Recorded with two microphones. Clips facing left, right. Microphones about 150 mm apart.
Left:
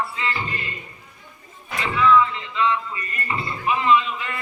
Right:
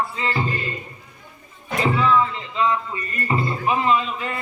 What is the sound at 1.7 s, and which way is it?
Music, 35° right (ahead or behind).